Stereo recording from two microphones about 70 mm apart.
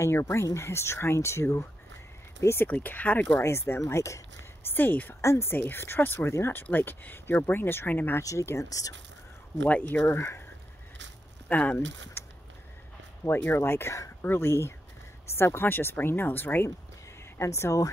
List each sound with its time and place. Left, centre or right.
0.0 s speech: left
3.4 s speech: left
4.6 s speech: left
5.2 s speech: left
8.2 s speech: left
9.7 s speech: left
10.1 s speech: left
11.4 s speech: left
17.4 s speech: left